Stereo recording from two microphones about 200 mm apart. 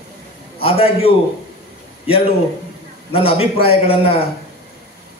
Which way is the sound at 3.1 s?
30° left (ahead or behind).